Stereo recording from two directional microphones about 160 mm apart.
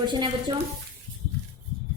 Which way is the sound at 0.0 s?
30° right (ahead or behind).